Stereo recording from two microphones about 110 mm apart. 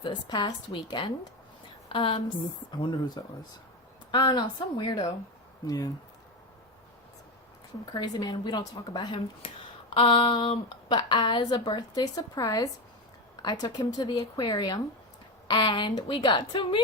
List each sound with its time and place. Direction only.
0.0 s a woman's voice: 45° left (ahead or behind)
1.9 s a woman's voice: 55° left (ahead or behind)
3.2 s a woman's voice: 40° left (ahead or behind)
5.6 s speech: 35° left (ahead or behind)
7.9 s a woman's voice: 40° left (ahead or behind)